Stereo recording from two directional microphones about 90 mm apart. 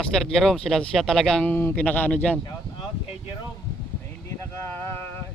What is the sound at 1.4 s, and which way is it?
Speech, 20° left (ahead or behind).